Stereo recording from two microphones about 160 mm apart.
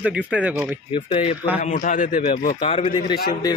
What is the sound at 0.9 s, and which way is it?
Speech, 35° left (ahead or behind).